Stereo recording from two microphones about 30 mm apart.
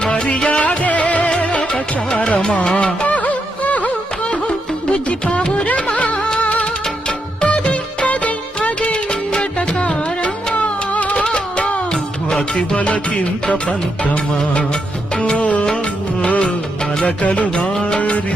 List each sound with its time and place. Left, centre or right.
0.0 s music: left
0.8 s music: left
3.1 s music: left
7.4 s music: left
8.8 s music: left
10.5 s music: left
11.1 s music: left
17.2 s music: left
17.7 s music: left